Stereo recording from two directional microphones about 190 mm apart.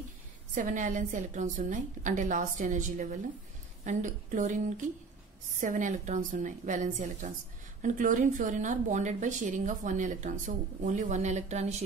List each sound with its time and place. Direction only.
0.6 s a woman's voice: 45° right (ahead or behind)